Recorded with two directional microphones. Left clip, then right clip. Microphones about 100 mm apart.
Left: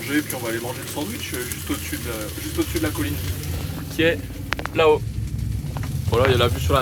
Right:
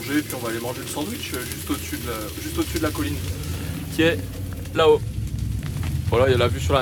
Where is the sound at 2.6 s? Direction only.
45° right (ahead or behind).